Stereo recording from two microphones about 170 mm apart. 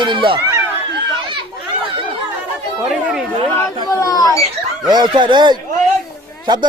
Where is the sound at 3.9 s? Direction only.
20° left (ahead or behind).